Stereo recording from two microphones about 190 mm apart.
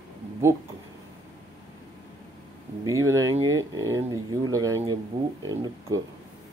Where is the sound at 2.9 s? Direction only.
15° right (ahead or behind).